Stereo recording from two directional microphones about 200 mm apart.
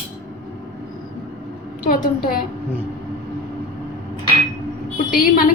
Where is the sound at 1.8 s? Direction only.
45° left (ahead or behind).